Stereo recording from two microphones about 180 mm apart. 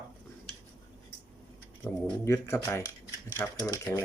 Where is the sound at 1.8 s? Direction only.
15° left (ahead or behind).